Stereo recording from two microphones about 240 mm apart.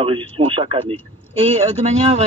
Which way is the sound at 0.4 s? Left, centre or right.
Right.